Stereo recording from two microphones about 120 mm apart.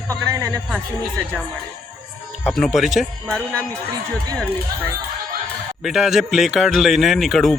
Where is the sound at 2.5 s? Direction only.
Centre (ahead or behind).